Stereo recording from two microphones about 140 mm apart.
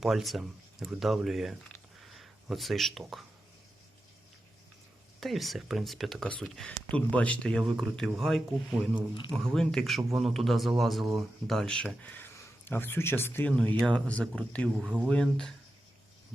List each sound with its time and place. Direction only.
0.0 s speech: centre (ahead or behind)
2.0 s a sound: centre (ahead or behind)
5.2 s speech: centre (ahead or behind)
9.0 s speech: 35° left (ahead or behind)
9.3 s speech: 5° left (ahead or behind)
14.8 s speech: 5° right (ahead or behind)